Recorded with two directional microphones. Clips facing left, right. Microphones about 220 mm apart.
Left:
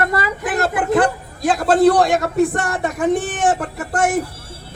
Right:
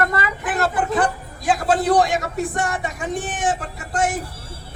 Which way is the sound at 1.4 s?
65° left (ahead or behind).